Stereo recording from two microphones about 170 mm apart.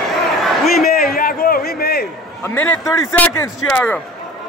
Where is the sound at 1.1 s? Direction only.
60° left (ahead or behind).